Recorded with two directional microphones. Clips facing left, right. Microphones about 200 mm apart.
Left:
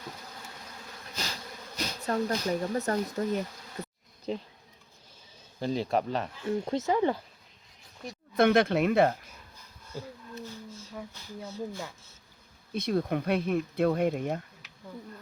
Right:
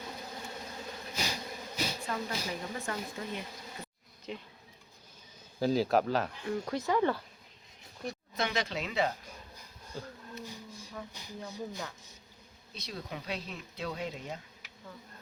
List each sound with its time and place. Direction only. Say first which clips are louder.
1.1 s bee: right 1 dB; 10° right (ahead or behind)
2.0 s speech: left 8 dB; 45° left (ahead or behind)
5.5 s speech: right 1 dB; 5° right (ahead or behind)
6.4 s speech: left 4 dB; 25° left (ahead or behind)
8.4 s speech: left 12 dB; 55° left (ahead or behind)
10.4 s a sound: left 3 dB; 15° right (ahead or behind)
11.1 s speech: left 2 dB; 15° right (ahead or behind)
12.7 s speech: left 14 dB; 55° left (ahead or behind)